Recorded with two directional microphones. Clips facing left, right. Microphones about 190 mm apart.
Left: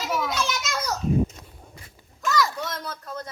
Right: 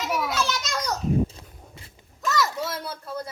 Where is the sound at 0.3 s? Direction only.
15° left (ahead or behind).